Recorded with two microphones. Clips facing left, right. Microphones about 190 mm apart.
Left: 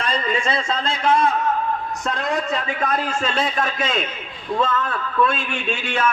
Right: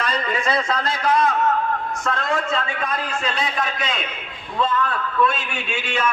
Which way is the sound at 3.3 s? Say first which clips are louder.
Left 3 dB; 50° left (ahead or behind).